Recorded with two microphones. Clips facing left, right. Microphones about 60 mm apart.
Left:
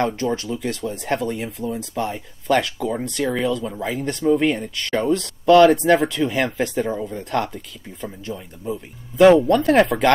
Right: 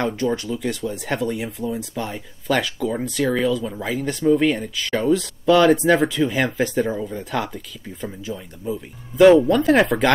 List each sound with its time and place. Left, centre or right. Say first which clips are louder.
0.0 s speech: even; centre